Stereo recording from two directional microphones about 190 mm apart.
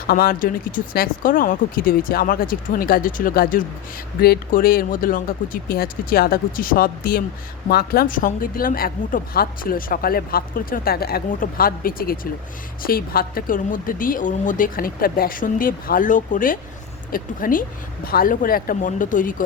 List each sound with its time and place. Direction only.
0.1 s a woman's voice: 50° left (ahead or behind)